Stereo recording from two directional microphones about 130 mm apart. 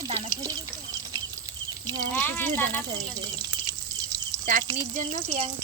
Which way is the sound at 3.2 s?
30° right (ahead or behind).